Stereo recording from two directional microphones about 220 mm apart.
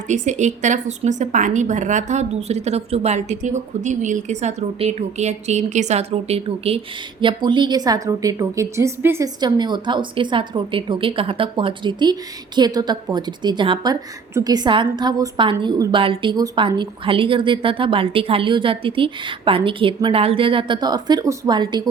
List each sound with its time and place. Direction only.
0.1 s a woman's voice: 35° right (ahead or behind)